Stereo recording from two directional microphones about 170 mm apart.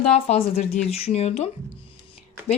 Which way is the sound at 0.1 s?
40° left (ahead or behind).